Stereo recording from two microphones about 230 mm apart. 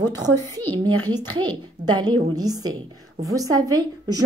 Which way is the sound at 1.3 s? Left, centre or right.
Right.